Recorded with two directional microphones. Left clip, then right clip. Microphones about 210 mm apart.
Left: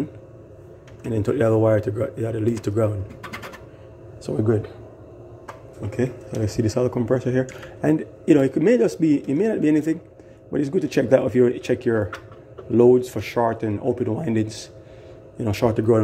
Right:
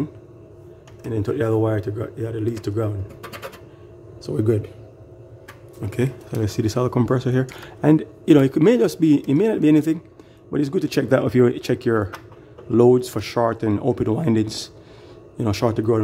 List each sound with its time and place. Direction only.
1.0 s speech: centre (ahead or behind)
4.4 s speech: 25° right (ahead or behind)
5.9 s speech: 20° right (ahead or behind)